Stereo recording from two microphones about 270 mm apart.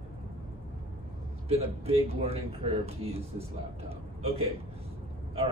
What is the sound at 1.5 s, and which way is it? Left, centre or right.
Speech, right.